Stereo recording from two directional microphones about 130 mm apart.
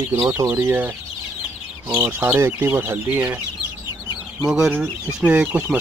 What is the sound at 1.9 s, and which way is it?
Speech, 15° right (ahead or behind).